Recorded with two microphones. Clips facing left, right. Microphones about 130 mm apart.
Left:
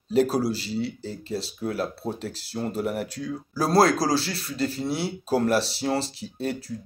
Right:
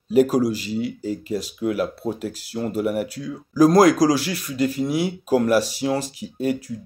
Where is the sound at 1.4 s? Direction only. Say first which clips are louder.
Right 4 dB; 15° right (ahead or behind).